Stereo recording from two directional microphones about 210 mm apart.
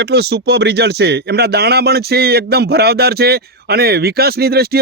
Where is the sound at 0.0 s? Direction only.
50° right (ahead or behind).